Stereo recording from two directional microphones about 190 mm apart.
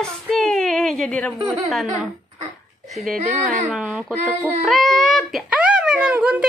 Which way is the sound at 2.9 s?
Centre (ahead or behind).